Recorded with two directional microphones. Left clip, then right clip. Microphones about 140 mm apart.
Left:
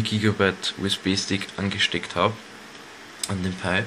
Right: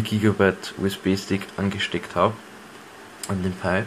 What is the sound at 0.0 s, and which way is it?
Speech, 20° right (ahead or behind).